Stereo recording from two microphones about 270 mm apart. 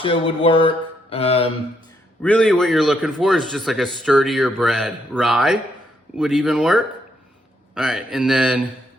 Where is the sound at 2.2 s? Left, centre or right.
Centre.